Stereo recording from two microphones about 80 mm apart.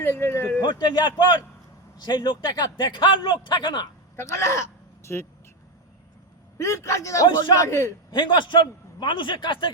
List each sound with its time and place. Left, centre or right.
0.0 s speech: left
0.6 s a man's voice: left
4.2 s speech: left
5.1 s speech: left
6.6 s speech: left
8.1 s a man's voice: left
9.0 s a man's voice: left